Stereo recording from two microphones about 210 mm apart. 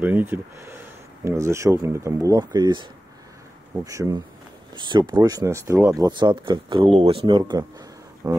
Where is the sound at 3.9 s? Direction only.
15° right (ahead or behind).